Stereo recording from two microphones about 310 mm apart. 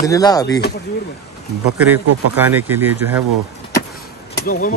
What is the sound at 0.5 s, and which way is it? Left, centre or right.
Speech, left.